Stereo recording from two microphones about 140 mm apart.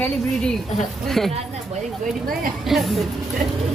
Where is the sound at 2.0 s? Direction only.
80° right.